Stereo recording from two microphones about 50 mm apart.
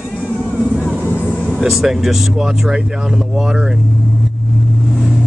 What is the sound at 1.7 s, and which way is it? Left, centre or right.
Speech, centre.